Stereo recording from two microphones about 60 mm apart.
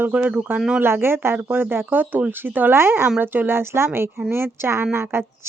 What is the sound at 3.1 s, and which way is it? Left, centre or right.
A woman's voice, right.